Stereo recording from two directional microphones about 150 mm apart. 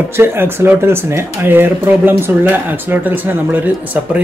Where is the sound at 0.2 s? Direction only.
15° right (ahead or behind).